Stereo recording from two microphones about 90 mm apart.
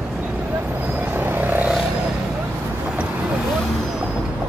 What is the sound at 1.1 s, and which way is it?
Vehicle, 25° right (ahead or behind).